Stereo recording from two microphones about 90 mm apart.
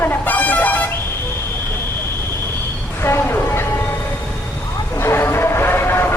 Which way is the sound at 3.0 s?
25° left (ahead or behind).